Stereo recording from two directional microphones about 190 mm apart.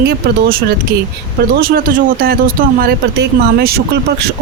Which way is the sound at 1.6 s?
50° right (ahead or behind).